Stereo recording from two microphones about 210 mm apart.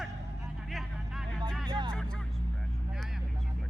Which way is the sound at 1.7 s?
25° right (ahead or behind).